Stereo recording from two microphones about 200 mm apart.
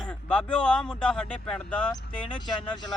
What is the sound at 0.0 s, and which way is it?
Speech, 5° left (ahead or behind).